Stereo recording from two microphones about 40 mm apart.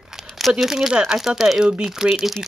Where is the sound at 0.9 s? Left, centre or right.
Right.